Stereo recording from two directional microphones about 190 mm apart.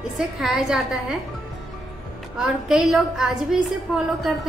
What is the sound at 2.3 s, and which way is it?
A woman's voice, centre (ahead or behind).